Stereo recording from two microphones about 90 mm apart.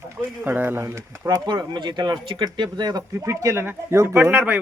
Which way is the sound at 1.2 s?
50° right (ahead or behind).